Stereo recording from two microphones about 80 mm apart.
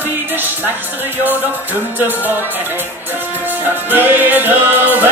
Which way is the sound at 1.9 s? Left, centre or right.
Right.